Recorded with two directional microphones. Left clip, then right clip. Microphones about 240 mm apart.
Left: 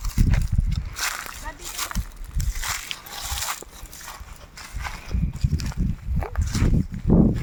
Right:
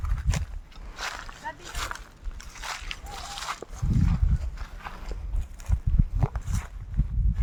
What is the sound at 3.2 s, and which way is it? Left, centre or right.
Dog, left.